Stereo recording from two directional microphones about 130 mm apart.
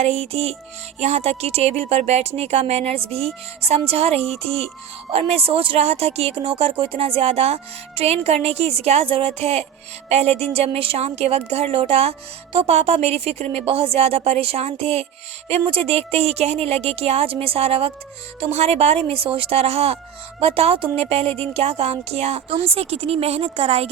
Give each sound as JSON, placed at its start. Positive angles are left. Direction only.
{"t": 0.0, "sound": "speech", "side_deg": -55}